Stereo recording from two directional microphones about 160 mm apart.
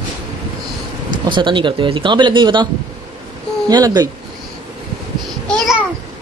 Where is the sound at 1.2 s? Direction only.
30° right (ahead or behind).